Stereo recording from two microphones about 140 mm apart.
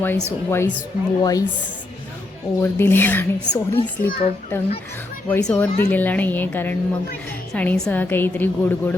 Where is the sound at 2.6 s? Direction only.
15° left (ahead or behind).